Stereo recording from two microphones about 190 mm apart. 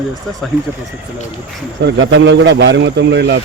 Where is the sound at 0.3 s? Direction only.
Centre (ahead or behind).